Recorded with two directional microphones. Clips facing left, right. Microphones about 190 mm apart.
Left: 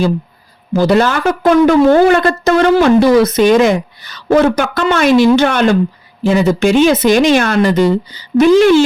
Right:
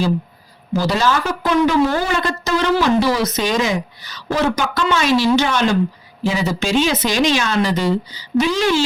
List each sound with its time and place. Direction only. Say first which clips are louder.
0.7 s a woman's voice: left 7 dB; 55° left (ahead or behind)